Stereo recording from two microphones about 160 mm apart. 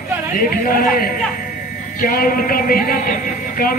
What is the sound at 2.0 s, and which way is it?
Music, 65° left (ahead or behind).